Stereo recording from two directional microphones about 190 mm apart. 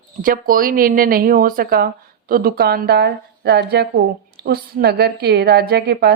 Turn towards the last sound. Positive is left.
turn(degrees=-55)  # may be behind; listen again after turning